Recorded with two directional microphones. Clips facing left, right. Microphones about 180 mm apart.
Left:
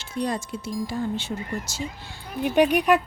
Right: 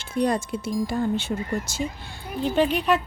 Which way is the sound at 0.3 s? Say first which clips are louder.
Right 4 dB; 55° right (ahead or behind).